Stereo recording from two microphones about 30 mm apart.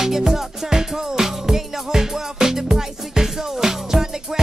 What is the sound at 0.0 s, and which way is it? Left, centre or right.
Music, centre.